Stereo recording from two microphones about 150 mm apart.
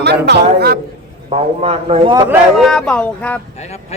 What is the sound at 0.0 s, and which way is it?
Speech, 90° right.